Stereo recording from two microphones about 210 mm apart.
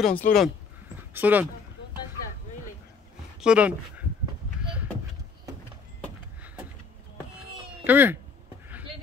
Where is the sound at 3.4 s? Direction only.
5° right (ahead or behind).